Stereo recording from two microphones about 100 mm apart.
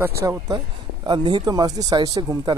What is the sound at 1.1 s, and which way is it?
Speech, 50° right (ahead or behind).